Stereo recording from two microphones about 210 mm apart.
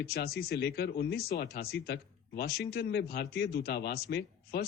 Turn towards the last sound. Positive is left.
turn(degrees=50)  # may be behind; listen again after turning